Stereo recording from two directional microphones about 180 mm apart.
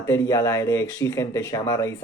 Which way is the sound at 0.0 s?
15° left (ahead or behind).